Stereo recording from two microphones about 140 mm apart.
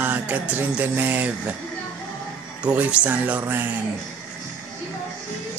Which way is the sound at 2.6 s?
10° right (ahead or behind).